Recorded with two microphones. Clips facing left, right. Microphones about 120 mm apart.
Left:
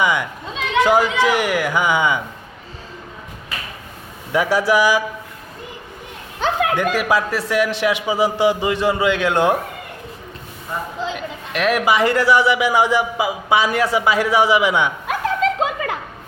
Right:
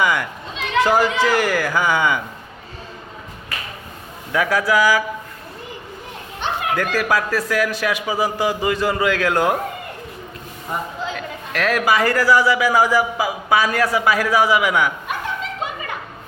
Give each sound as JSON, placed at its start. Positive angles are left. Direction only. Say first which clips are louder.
{"t": 0.0, "sound": "chatter", "louder": "left 1 dB", "side_deg": 20}
{"t": 0.9, "sound": "a man's voice", "louder": "left 1 dB", "side_deg": 20}
{"t": 4.3, "sound": "speech", "louder": "left 2 dB", "side_deg": 25}
{"t": 6.7, "sound": "speech", "louder": "left 2 dB", "side_deg": 20}
{"t": 11.0, "sound": "speech", "louder": "left 1 dB", "side_deg": 20}
{"t": 15.0, "sound": "music", "louder": "left 7 dB", "side_deg": 90}